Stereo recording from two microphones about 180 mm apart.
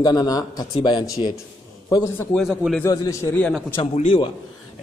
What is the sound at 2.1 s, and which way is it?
Speech, centre (ahead or behind).